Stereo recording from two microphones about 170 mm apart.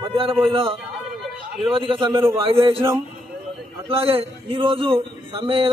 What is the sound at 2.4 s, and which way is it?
A man's voice, 30° right (ahead or behind).